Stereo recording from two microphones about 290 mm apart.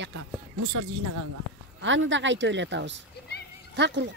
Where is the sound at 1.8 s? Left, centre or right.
Right.